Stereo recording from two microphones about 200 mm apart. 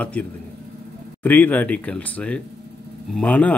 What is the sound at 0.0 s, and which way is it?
A man's voice, 5° left (ahead or behind).